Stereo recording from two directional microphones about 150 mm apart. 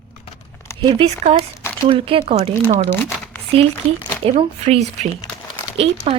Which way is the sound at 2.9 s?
15° left (ahead or behind).